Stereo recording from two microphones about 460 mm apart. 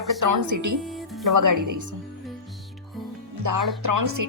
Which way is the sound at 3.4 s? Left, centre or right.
Right.